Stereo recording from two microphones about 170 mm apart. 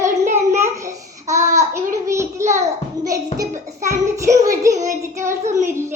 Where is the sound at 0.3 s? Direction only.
15° right (ahead or behind).